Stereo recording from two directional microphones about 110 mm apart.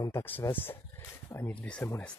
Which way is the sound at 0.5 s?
20° left (ahead or behind).